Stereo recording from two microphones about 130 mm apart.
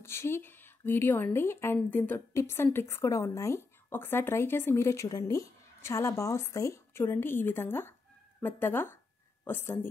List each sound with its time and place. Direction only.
0.0 s a woman's voice: 20° left (ahead or behind)